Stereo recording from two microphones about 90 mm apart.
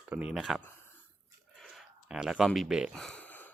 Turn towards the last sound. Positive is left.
turn(degrees=20)  # may be behind; listen again after turning